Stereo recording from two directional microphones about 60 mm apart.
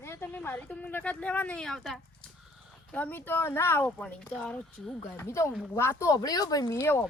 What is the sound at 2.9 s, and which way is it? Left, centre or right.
Speech, left.